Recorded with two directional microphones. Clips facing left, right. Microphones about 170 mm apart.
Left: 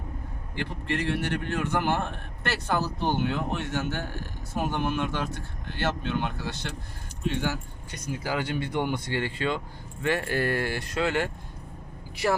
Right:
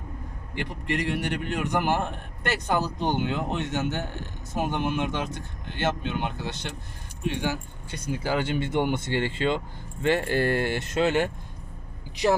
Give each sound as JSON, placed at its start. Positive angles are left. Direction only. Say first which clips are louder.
{"t": 0.5, "sound": "a man's voice", "louder": "right 1 dB", "side_deg": -15}
{"t": 7.9, "sound": "speech", "louder": "right 3 dB", "side_deg": -30}